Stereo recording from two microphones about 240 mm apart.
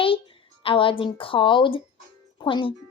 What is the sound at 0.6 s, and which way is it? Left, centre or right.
Speech, left.